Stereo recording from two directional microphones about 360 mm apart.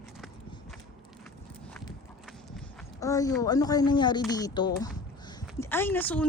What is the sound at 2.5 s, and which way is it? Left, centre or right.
Speech, centre.